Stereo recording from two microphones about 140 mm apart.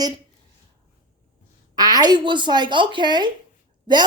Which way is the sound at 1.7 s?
30° right (ahead or behind).